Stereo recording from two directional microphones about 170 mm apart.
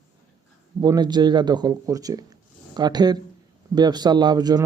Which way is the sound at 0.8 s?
25° right (ahead or behind).